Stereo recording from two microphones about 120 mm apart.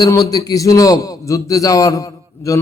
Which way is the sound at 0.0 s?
30° left (ahead or behind).